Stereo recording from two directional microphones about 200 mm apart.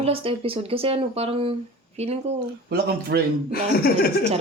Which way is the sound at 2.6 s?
50° right (ahead or behind).